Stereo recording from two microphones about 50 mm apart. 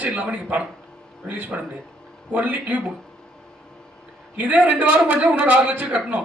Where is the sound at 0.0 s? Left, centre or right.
Right.